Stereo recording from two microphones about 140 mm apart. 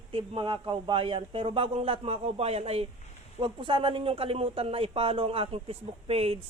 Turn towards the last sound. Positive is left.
turn(degrees=-45)  # may be behind; listen again after turning